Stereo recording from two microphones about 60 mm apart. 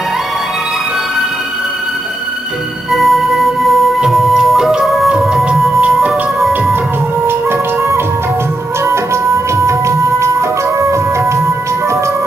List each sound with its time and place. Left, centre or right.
2.9 s music: centre
7.2 s music: right